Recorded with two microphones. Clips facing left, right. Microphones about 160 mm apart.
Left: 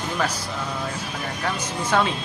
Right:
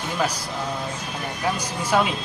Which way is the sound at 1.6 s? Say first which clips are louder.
Left 1 dB; 10° right (ahead or behind).